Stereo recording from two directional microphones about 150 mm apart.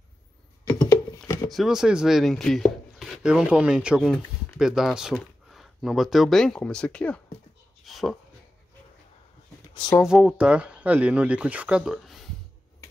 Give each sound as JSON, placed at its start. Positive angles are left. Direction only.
{"t": 0.7, "sound": "a sound", "side_deg": 20}
{"t": 1.5, "sound": "speech", "side_deg": 0}
{"t": 10.0, "sound": "speech", "side_deg": -5}